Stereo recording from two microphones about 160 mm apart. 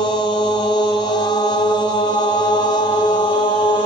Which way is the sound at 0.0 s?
30° left (ahead or behind).